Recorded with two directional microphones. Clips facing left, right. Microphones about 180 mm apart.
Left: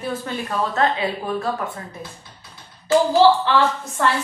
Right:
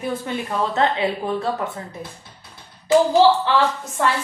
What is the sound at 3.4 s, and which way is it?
Speech, 15° right (ahead or behind).